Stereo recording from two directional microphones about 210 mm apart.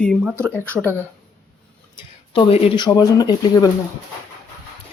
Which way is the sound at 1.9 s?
25° left (ahead or behind).